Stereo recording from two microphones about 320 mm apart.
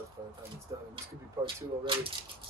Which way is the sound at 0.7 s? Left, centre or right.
Centre.